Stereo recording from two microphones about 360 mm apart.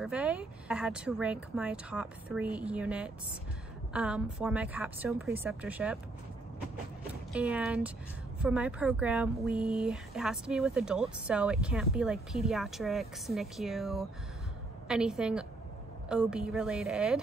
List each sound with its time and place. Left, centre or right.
0.0 s speech: centre
7.3 s speech: centre